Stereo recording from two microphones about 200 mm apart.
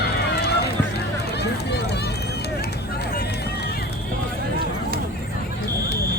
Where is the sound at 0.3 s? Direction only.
55° left (ahead or behind).